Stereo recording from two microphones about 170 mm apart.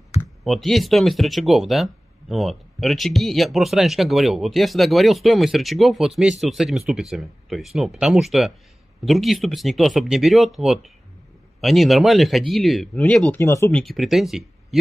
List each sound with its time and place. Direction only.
0.4 s speech: centre (ahead or behind)
13.3 s speech: 15° left (ahead or behind)
13.7 s speech: centre (ahead or behind)